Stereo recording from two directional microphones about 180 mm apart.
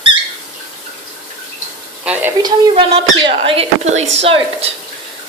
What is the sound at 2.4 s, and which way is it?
Speech, 30° right (ahead or behind).